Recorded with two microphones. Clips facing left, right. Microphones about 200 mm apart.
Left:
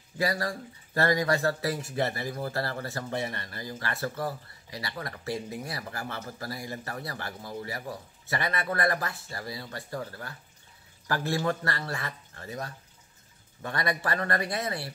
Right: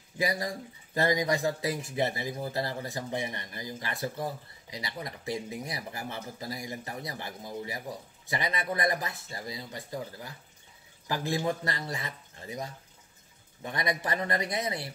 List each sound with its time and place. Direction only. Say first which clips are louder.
0.2 s speech: left 1 dB; 20° right (ahead or behind)